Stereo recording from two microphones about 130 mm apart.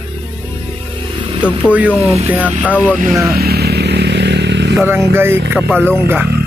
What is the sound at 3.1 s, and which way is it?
Speech, 20° right (ahead or behind).